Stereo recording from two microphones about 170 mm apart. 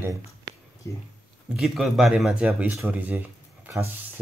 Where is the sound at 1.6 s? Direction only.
Centre (ahead or behind).